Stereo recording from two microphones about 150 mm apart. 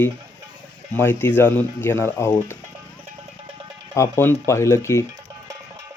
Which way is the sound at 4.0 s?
15° left (ahead or behind).